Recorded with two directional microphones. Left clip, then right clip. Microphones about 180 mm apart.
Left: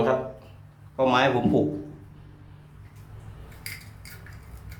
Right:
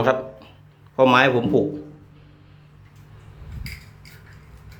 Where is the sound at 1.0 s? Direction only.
20° right (ahead or behind).